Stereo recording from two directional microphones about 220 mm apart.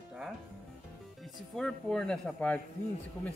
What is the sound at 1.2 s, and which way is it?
Speech, 5° left (ahead or behind).